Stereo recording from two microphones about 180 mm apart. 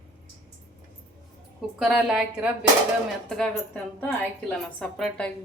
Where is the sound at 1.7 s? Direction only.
5° right (ahead or behind).